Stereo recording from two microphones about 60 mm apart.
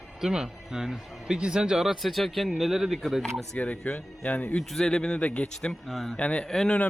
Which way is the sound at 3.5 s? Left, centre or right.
Left.